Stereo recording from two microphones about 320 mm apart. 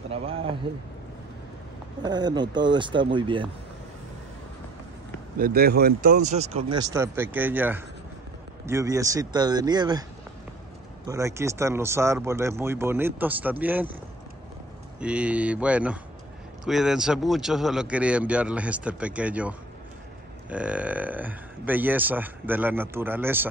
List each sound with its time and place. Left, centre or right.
0.1 s speech: centre
2.0 s speech: centre
5.4 s speech: right; by 10.0 s centre
11.1 s speech: centre
15.0 s speech: centre